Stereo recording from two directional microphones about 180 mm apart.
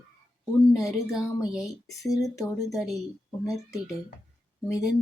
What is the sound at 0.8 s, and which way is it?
Speech, 5° right (ahead or behind).